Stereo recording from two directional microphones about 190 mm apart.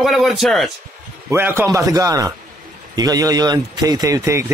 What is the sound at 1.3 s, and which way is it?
Speech, 10° right (ahead or behind).